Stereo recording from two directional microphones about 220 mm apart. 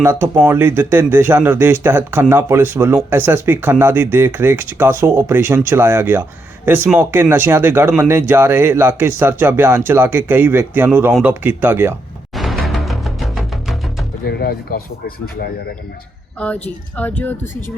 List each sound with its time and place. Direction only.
0.0 s speech: 10° right (ahead or behind)
12.6 s music: centre (ahead or behind)
14.3 s speech: 45° left (ahead or behind)
16.4 s speech: 5° left (ahead or behind)